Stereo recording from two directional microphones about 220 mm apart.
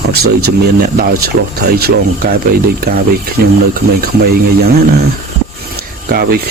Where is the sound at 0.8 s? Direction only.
45° right (ahead or behind).